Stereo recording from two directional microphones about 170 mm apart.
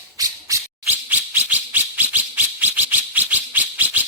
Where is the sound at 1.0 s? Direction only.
10° right (ahead or behind).